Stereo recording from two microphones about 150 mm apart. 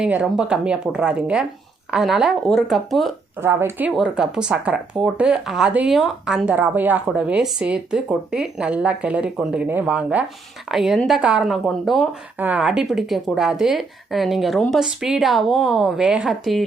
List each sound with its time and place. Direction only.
0.0 s speech: 5° right (ahead or behind)
3.4 s speech: 15° right (ahead or behind); by 12.0 s centre (ahead or behind)
12.4 s speech: 10° right (ahead or behind)